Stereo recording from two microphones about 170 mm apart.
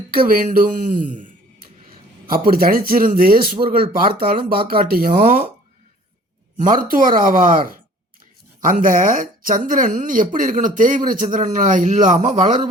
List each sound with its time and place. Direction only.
0.3 s speech: 55° right (ahead or behind)
2.3 s speech: 60° right (ahead or behind)
6.6 s speech: 55° right (ahead or behind)